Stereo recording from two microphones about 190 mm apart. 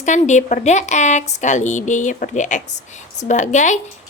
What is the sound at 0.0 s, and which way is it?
Speech, 40° left (ahead or behind).